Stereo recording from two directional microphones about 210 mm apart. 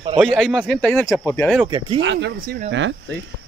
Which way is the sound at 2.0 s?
55° right (ahead or behind).